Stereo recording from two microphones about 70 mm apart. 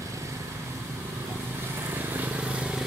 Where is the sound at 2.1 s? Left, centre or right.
Right.